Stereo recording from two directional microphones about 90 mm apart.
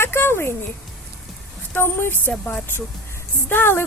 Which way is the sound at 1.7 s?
25° left (ahead or behind).